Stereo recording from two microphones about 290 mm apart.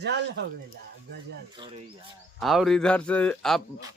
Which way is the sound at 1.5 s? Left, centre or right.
Centre.